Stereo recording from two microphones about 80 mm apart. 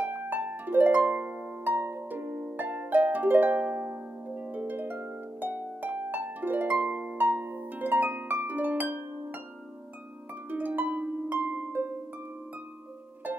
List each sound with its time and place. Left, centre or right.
0.0 s harp: right
10.5 s harp: right